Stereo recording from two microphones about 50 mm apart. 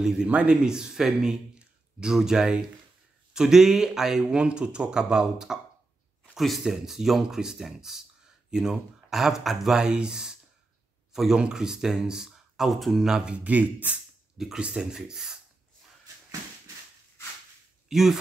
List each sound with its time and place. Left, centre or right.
0.3 s speech: right
6.3 s a man's voice: centre
11.3 s speech: centre
13.1 s speech: centre
13.4 s speech: right
14.6 s speech: centre
17.8 s speech: centre